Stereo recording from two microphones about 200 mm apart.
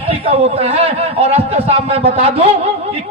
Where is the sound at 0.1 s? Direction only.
30° right (ahead or behind).